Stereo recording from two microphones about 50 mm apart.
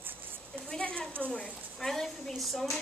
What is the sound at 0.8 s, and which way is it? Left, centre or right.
Speech, left.